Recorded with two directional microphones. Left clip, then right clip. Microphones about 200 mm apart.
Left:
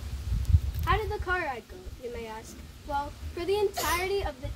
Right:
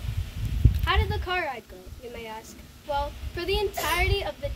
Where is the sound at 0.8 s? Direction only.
15° right (ahead or behind).